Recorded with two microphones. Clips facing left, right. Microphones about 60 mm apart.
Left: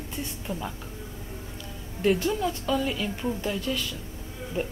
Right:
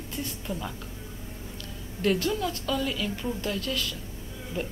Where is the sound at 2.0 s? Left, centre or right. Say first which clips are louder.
Left 2 dB; centre.